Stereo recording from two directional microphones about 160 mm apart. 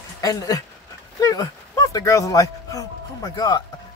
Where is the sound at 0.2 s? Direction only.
20° left (ahead or behind).